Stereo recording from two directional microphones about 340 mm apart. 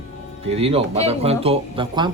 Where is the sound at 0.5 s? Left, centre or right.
Centre.